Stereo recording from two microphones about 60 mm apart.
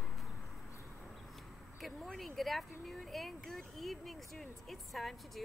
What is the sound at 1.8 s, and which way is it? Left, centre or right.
Speech, centre.